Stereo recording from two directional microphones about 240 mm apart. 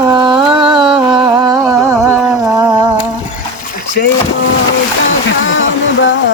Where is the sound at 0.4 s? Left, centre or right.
Centre.